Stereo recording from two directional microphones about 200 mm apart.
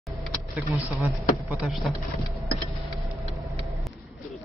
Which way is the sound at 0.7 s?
15° right (ahead or behind).